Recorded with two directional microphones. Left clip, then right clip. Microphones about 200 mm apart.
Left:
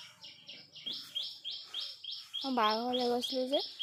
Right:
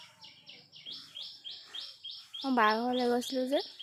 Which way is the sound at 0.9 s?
55° left (ahead or behind).